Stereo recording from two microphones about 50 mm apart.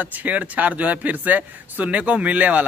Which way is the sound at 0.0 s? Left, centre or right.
Right.